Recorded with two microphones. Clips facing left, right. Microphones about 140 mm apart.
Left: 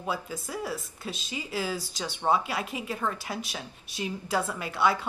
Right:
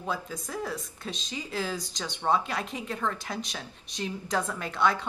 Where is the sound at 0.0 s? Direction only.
10° left (ahead or behind).